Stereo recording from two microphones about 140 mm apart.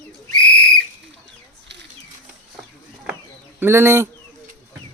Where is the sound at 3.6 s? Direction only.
15° right (ahead or behind).